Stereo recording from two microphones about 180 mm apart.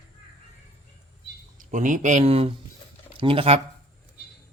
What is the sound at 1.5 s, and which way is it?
Speech, 45° right (ahead or behind).